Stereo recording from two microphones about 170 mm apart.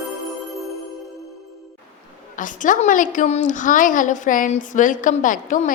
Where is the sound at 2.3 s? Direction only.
50° left (ahead or behind).